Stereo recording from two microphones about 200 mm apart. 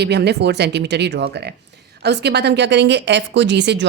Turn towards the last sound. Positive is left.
turn(degrees=-60)  # may be behind; listen again after turning